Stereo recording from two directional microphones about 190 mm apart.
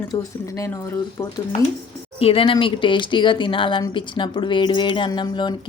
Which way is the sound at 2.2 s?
30° left (ahead or behind).